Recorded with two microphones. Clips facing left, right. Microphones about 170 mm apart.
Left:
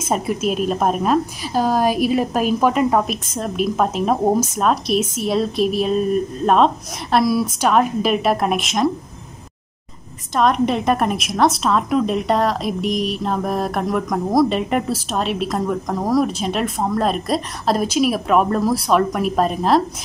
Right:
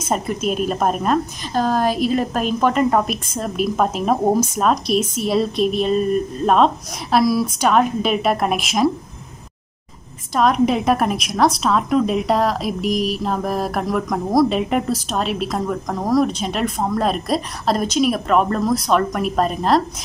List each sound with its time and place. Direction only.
0.1 s a woman's voice: 5° left (ahead or behind)
10.3 s a woman's voice: centre (ahead or behind)